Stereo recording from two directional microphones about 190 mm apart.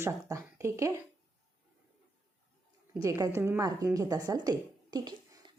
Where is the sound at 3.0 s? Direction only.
15° right (ahead or behind).